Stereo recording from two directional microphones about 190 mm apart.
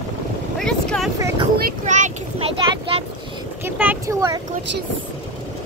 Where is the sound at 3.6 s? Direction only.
10° right (ahead or behind).